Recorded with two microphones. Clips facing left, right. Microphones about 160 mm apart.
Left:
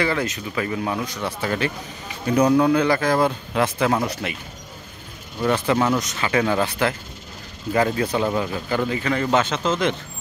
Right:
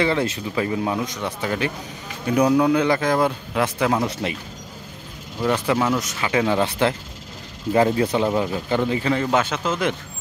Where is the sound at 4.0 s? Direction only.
25° right (ahead or behind).